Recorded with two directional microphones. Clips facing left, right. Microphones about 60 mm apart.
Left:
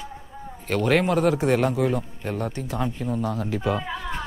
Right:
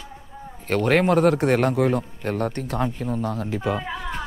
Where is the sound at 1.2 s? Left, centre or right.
Right.